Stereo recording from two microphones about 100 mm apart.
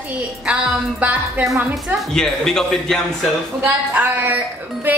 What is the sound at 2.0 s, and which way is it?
A man's voice, 5° left (ahead or behind).